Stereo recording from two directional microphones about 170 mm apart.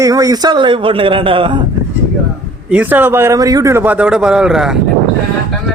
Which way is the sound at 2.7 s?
10° right (ahead or behind).